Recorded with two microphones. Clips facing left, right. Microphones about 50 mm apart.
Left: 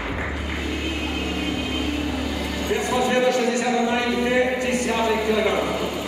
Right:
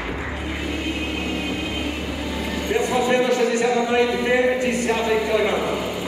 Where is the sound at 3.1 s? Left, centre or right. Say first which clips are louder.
Right 1 dB; right.